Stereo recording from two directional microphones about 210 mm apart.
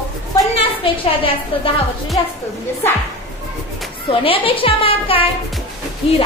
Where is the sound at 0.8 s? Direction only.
25° left (ahead or behind).